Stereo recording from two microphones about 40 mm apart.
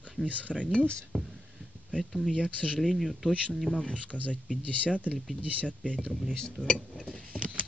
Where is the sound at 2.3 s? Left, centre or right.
Left.